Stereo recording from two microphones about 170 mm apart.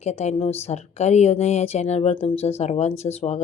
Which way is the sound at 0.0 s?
40° left (ahead or behind).